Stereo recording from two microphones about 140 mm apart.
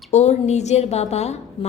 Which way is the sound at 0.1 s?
55° left (ahead or behind).